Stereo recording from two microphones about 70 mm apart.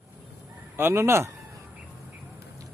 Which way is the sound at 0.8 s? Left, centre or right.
Right.